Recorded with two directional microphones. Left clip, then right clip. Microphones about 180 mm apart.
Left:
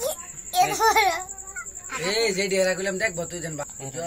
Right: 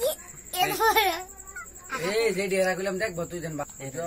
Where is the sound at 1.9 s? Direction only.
25° right (ahead or behind).